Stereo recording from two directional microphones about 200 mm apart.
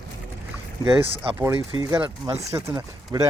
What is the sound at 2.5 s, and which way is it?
Speech, 15° right (ahead or behind).